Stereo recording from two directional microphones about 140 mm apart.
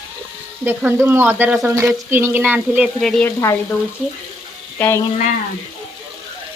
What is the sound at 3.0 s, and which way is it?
Frying, 5° left (ahead or behind).